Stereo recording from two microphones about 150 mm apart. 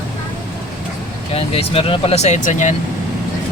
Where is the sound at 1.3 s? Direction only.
40° left (ahead or behind).